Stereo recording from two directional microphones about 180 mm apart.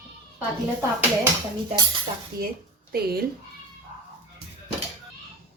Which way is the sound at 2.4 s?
55° right (ahead or behind).